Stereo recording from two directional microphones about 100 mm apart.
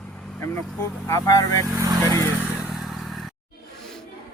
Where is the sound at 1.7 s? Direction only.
40° right (ahead or behind).